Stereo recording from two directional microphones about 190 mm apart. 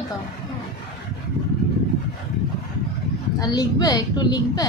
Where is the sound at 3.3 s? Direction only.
20° left (ahead or behind).